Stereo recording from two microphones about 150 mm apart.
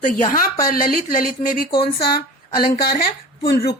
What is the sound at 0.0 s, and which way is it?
Speech, 65° left (ahead or behind).